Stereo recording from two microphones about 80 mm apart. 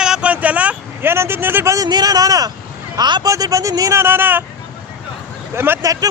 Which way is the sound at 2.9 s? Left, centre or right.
Right.